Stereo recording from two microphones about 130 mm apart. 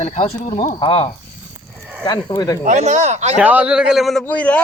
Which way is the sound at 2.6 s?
65° right (ahead or behind).